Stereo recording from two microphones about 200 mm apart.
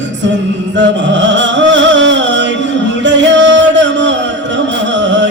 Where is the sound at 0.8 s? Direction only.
65° right (ahead or behind).